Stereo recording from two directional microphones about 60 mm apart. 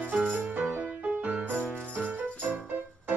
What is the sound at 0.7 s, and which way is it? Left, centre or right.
Music, right.